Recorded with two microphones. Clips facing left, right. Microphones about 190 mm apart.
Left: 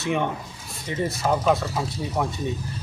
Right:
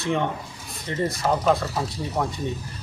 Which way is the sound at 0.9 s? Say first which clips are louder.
Even; 10° left (ahead or behind).